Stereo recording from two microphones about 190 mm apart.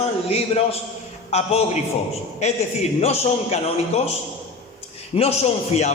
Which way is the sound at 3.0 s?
35° left (ahead or behind).